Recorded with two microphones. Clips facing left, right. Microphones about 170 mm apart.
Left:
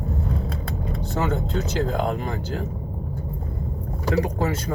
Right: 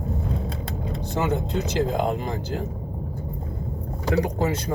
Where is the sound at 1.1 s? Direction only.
15° right (ahead or behind).